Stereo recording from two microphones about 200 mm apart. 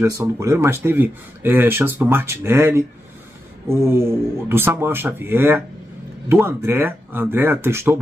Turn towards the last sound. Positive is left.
turn(degrees=-10)  # may be behind; listen again after turning